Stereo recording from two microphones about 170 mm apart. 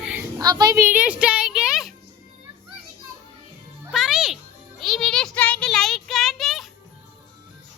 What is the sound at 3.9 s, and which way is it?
Music, centre (ahead or behind).